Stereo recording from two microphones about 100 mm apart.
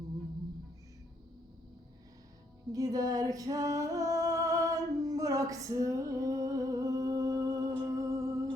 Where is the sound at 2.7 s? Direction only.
40° right (ahead or behind).